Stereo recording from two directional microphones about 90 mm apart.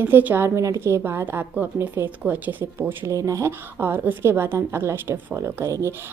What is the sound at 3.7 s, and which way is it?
A woman's voice, 20° right (ahead or behind).